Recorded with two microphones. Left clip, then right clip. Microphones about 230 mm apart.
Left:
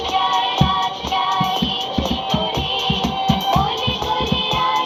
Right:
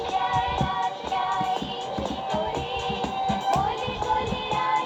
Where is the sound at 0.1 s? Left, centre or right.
Left.